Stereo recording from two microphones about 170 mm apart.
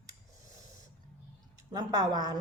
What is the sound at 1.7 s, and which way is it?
Speech, 20° right (ahead or behind).